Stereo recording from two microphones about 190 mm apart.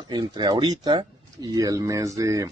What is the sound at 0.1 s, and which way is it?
Speech, 20° right (ahead or behind).